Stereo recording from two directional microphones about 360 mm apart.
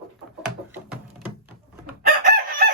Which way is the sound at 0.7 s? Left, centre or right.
Centre.